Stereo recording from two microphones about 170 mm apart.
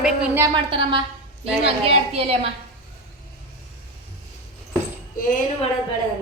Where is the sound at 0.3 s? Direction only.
25° right (ahead or behind).